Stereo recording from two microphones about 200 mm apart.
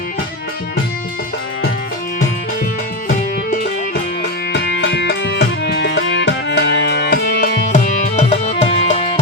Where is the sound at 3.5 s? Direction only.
55° left (ahead or behind).